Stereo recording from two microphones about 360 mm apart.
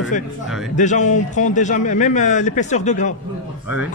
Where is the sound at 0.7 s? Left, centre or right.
Centre.